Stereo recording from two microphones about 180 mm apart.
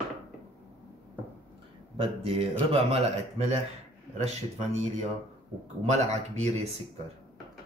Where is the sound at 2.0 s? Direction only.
30° right (ahead or behind).